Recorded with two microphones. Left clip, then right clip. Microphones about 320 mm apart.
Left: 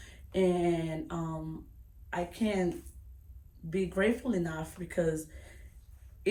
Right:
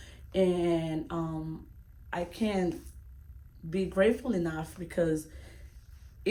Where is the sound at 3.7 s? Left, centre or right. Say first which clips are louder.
Right 3 dB; centre.